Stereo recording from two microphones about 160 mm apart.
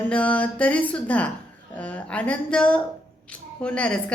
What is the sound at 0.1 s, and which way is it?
A woman's voice, 10° left (ahead or behind).